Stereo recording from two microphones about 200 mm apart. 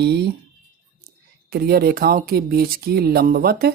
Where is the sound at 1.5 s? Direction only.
50° right (ahead or behind).